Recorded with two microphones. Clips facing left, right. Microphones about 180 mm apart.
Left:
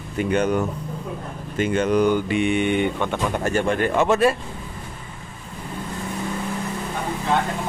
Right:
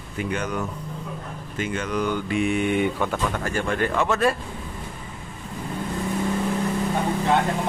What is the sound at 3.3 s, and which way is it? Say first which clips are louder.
Speech: left 4 dB; 20° left (ahead or behind).